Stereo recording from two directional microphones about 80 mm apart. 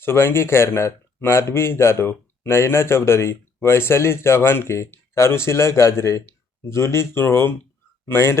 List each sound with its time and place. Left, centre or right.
0.0 s a man's voice: left